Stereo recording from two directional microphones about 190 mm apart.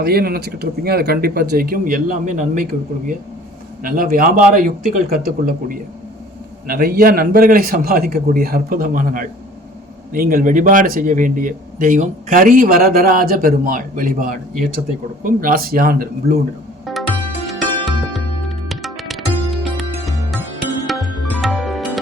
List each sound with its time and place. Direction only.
0.0 s a man's voice: 55° right (ahead or behind)
3.8 s a man's voice: 50° right (ahead or behind)
16.8 s music: centre (ahead or behind)